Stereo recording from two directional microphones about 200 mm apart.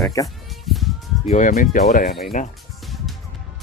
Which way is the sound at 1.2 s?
40° left (ahead or behind).